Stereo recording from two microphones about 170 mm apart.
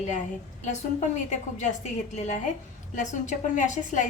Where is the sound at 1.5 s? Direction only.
45° left (ahead or behind).